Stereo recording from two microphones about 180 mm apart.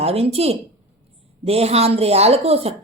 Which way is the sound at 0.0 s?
35° right (ahead or behind).